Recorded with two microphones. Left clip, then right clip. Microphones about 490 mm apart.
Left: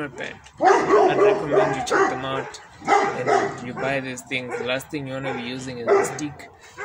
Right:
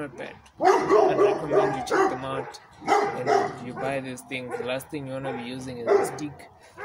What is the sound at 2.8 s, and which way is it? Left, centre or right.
Dog, right.